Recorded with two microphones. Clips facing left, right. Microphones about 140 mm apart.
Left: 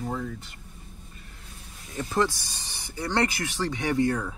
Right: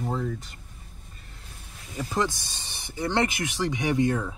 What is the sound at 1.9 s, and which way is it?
Speech, 15° right (ahead or behind).